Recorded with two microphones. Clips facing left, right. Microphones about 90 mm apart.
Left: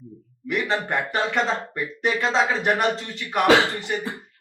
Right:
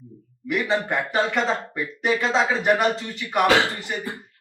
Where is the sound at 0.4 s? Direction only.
Centre (ahead or behind).